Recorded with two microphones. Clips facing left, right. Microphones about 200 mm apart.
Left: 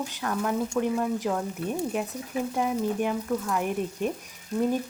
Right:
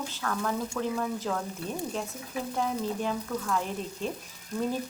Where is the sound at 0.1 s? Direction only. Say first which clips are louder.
Left 3 dB; 15° left (ahead or behind).